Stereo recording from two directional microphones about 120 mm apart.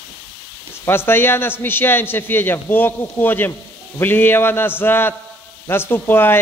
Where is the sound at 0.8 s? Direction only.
20° left (ahead or behind).